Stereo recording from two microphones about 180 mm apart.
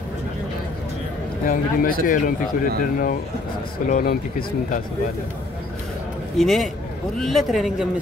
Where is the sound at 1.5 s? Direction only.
50° left (ahead or behind).